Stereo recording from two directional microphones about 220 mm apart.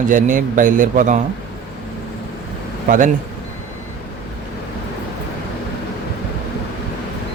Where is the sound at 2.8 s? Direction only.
35° right (ahead or behind).